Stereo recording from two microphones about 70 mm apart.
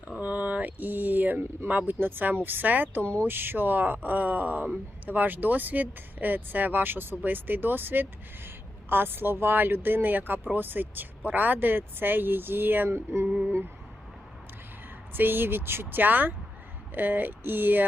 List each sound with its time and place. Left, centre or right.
0.2 s a sound: right
1.9 s speech: right
3.0 s speech: centre
3.2 s speech: right
15.1 s speech: right